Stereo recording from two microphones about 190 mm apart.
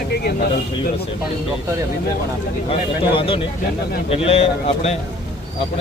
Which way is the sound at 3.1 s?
30° left (ahead or behind).